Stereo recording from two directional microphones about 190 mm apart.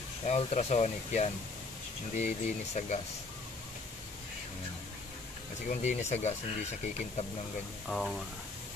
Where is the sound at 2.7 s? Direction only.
35° left (ahead or behind).